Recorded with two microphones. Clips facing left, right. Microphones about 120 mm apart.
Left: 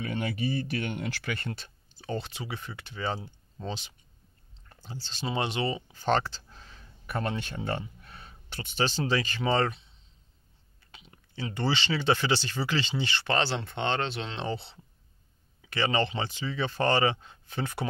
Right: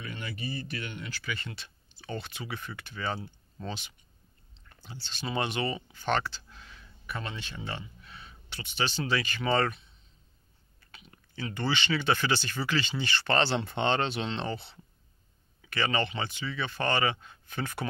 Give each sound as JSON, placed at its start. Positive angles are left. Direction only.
{"t": 0.0, "sound": "speech", "side_deg": 70}
{"t": 13.3, "sound": "speech", "side_deg": 10}
{"t": 13.6, "sound": "speech", "side_deg": 0}
{"t": 14.5, "sound": "speech", "side_deg": 30}